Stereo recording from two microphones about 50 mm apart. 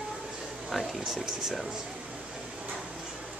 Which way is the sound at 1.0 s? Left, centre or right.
Centre.